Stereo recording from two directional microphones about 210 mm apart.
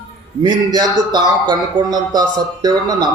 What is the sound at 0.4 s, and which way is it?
Speech, 20° right (ahead or behind).